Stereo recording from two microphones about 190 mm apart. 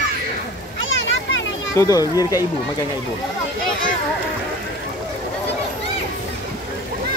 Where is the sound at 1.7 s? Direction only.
15° left (ahead or behind).